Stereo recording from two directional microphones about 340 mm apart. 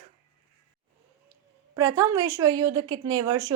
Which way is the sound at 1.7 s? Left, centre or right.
Centre.